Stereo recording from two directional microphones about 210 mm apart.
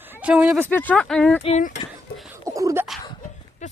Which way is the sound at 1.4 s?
30° left (ahead or behind).